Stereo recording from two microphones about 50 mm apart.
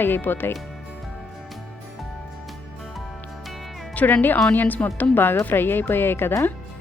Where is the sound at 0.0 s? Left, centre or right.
Left.